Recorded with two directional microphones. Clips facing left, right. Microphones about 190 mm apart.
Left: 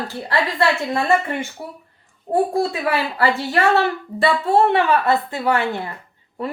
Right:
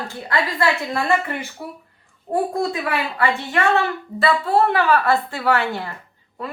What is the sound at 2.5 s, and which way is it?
A woman's voice, 30° left (ahead or behind).